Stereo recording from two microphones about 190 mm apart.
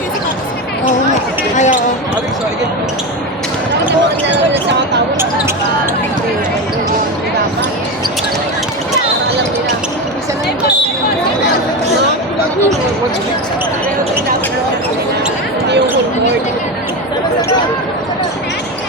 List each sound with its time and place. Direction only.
1.5 s basketball bounce: 40° left (ahead or behind)